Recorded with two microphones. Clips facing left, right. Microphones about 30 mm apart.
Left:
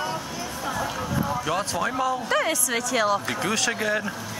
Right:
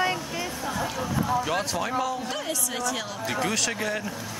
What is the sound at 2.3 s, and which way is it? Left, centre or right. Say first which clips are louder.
Speech: left 7 dB; left.